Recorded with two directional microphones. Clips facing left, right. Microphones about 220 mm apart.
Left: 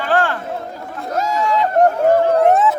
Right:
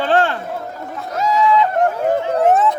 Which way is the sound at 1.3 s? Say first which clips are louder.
Right 3 dB; 45° left (ahead or behind).